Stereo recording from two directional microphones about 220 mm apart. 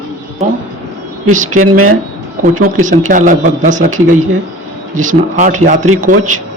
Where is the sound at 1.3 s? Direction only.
35° right (ahead or behind).